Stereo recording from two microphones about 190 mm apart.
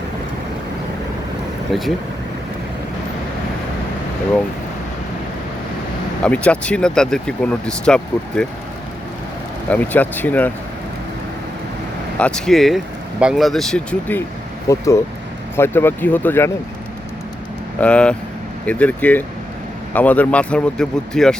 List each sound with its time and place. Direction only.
1.7 s speech: centre (ahead or behind)
6.2 s speech: 5° left (ahead or behind)
9.6 s speech: 10° left (ahead or behind)
12.2 s speech: 5° left (ahead or behind)
17.7 s speech: 5° left (ahead or behind)